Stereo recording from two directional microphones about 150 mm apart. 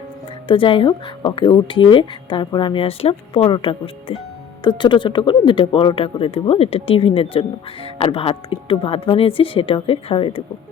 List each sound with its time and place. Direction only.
0.4 s speech: 35° left (ahead or behind)
4.8 s speech: 30° left (ahead or behind)